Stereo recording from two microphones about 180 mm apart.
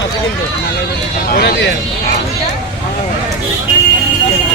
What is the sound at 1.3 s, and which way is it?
Speech, 60° left (ahead or behind).